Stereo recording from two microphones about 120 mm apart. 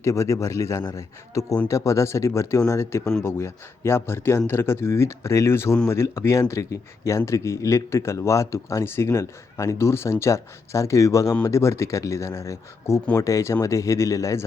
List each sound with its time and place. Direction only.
0.0 s speech: 25° left (ahead or behind)